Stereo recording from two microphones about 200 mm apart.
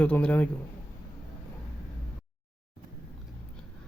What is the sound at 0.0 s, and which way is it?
Speech, 5° left (ahead or behind).